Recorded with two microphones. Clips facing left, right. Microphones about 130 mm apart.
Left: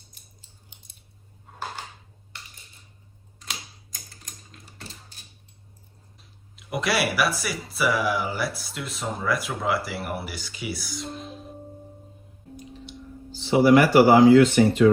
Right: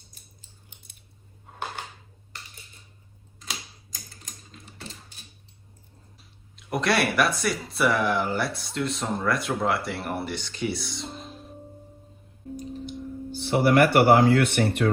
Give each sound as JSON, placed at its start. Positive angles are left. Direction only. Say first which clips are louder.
{"t": 6.6, "sound": "speech", "louder": "right 1 dB", "side_deg": 0}
{"t": 12.5, "sound": "tick", "louder": "right 7 dB", "side_deg": -40}
{"t": 13.3, "sound": "speech", "louder": "left 4 dB", "side_deg": -60}